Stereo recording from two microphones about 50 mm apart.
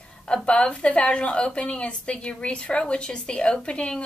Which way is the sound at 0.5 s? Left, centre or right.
Left.